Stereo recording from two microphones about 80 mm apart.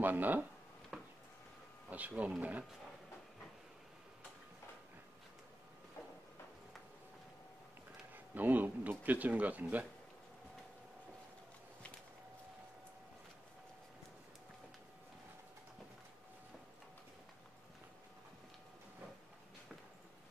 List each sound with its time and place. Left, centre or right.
0.0 s speech: right
0.9 s a sound: centre
1.9 s speech: centre
8.1 s speech: right